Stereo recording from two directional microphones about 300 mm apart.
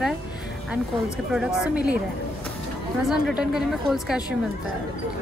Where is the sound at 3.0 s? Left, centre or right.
Centre.